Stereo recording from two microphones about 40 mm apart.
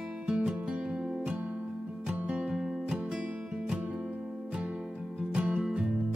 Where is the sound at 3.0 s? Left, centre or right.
Right.